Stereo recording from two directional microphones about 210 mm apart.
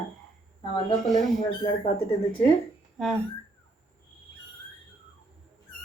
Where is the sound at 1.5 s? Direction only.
20° left (ahead or behind).